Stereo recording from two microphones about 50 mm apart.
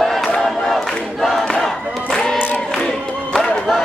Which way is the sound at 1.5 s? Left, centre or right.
Centre.